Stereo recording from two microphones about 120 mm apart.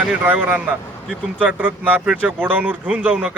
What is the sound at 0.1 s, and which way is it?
A man's voice, 10° right (ahead or behind).